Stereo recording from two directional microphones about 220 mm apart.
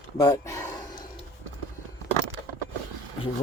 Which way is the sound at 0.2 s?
15° left (ahead or behind).